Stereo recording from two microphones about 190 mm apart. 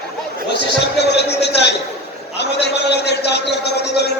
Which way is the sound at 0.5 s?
60° left (ahead or behind).